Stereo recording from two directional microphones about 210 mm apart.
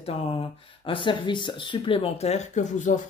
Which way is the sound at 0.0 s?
25° left (ahead or behind).